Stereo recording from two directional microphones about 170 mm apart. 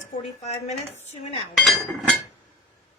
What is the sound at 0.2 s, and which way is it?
A woman's voice, 40° left (ahead or behind).